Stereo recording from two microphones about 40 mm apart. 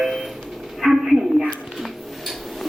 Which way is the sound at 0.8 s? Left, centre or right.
Centre.